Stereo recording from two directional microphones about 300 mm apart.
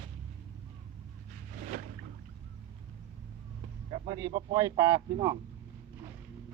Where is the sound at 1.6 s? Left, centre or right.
Right.